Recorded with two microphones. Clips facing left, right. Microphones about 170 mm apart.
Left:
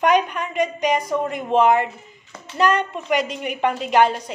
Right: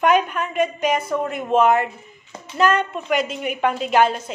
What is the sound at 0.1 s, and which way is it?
Speech, 50° right (ahead or behind).